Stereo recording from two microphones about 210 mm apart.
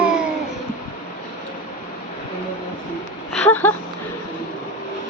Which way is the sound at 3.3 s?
10° left (ahead or behind).